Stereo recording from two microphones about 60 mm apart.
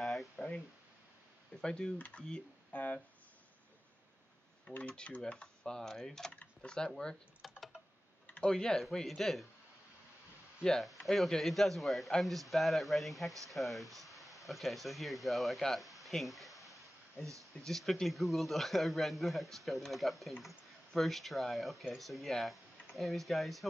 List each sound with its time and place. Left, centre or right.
0.0 s a sound: centre
1.6 s speech: centre
2.0 s speech: left
4.7 s speech: left
6.3 s speech: left
7.4 s typing: centre
8.5 s a man's voice: centre
10.6 s a man's voice: centre